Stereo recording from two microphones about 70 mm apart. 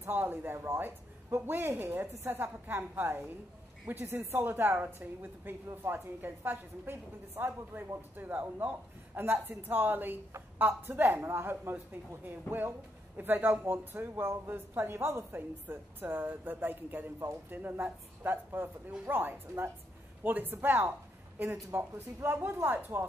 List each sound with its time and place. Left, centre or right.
0.0 s a man's voice: right
4.0 s a woman's voice: right